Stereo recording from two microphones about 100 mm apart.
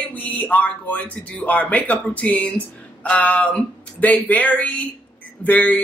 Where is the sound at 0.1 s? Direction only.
15° left (ahead or behind).